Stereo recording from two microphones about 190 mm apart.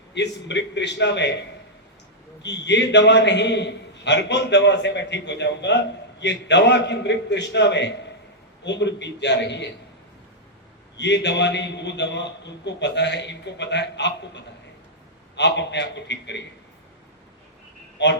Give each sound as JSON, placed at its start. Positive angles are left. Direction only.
{"t": 0.1, "sound": "a man's voice", "side_deg": 65}
{"t": 10.9, "sound": "a man's voice", "side_deg": 65}
{"t": 17.9, "sound": "a sound", "side_deg": 65}